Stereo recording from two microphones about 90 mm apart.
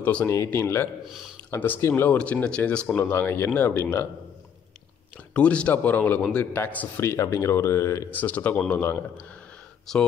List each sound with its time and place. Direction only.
0.0 s speech: 15° left (ahead or behind)
0.5 s speech: 25° left (ahead or behind)
1.0 s speech: centre (ahead or behind)
1.5 s speech: 25° left (ahead or behind)
3.0 s speech: 20° left (ahead or behind)
5.3 s speech: 15° left (ahead or behind)
7.0 s speech: 30° left (ahead or behind)
8.1 s speech: 20° left (ahead or behind)
9.9 s speech: 5° left (ahead or behind)